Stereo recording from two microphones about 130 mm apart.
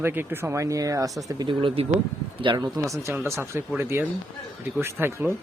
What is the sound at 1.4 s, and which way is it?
A man's voice, 45° right (ahead or behind).